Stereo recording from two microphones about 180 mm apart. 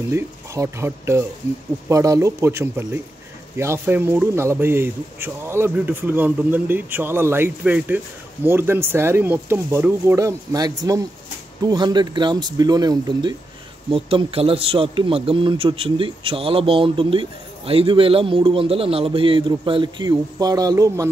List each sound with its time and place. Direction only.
0.1 s a man's voice: 15° right (ahead or behind)